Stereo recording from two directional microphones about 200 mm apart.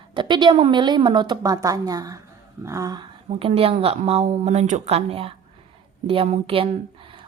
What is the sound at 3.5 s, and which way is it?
A woman's voice, 30° right (ahead or behind).